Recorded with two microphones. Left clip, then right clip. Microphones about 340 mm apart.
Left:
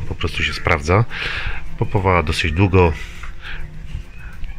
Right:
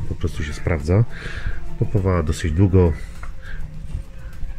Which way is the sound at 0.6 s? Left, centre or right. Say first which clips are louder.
Left 5 dB; left.